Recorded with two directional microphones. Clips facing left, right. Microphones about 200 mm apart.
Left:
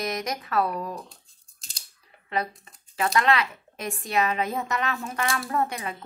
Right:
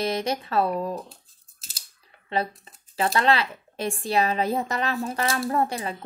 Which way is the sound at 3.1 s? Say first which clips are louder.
Even; 30° right (ahead or behind).